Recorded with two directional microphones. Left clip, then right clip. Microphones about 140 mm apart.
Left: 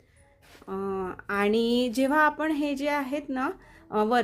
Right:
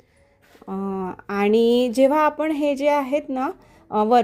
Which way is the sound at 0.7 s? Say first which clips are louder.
Right 3 dB; 30° right (ahead or behind).